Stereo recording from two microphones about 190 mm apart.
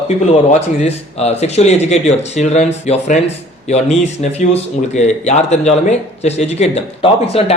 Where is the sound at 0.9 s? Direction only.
35° left (ahead or behind).